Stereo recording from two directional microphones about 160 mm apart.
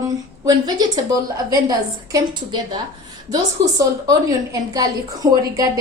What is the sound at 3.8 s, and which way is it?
A woman's voice, 20° right (ahead or behind).